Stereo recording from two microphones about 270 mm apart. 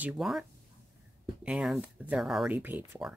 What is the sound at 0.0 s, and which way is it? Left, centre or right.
Speech, centre.